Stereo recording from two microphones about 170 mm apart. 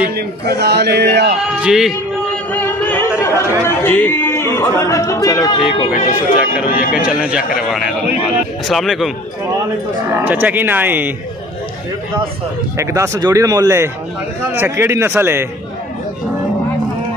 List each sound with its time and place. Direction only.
0.1 s a man's voice: 70° right (ahead or behind)
1.4 s a man's voice: 5° right (ahead or behind)
2.5 s speech: 10° left (ahead or behind)
5.9 s speech: 50° left (ahead or behind)
7.0 s a man's voice: 5° right (ahead or behind)
10.1 s speech: 10° right (ahead or behind)
12.7 s speech: 15° right (ahead or behind)